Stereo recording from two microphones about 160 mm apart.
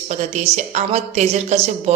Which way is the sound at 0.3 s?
45° right (ahead or behind).